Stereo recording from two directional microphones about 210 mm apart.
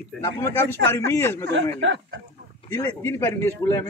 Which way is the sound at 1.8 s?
60° right (ahead or behind).